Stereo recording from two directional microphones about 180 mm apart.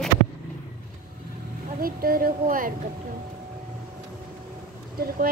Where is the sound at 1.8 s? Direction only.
55° right (ahead or behind).